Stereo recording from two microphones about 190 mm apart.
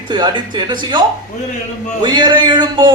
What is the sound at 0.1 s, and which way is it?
A man's voice, 25° right (ahead or behind).